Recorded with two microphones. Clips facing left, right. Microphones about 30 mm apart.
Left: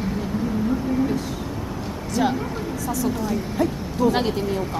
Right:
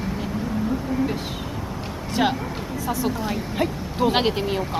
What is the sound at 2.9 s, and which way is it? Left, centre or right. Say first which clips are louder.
Speech: even; right.